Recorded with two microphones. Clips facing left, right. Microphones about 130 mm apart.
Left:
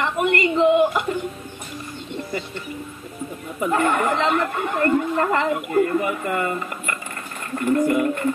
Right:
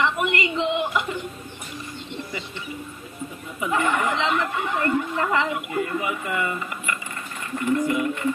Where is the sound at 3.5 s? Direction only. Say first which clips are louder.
Left 3 dB; 50° left (ahead or behind).